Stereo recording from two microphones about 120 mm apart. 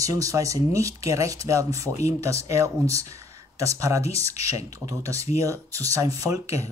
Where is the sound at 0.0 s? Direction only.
30° right (ahead or behind).